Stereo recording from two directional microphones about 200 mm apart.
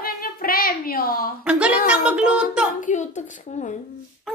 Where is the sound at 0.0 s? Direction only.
45° left (ahead or behind).